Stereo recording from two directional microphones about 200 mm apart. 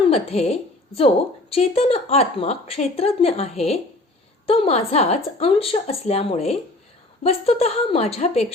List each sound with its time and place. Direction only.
0.1 s a woman's voice: 30° left (ahead or behind)